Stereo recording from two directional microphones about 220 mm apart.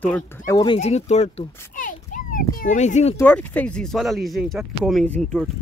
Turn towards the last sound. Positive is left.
turn(degrees=0)  # may be behind; listen again after turning